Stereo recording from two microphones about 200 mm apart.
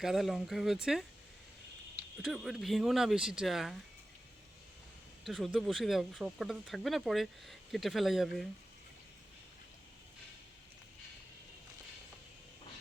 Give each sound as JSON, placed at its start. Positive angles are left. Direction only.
{"t": 0.0, "sound": "speech", "side_deg": 0}
{"t": 2.2, "sound": "speech", "side_deg": 0}
{"t": 5.2, "sound": "speech", "side_deg": 0}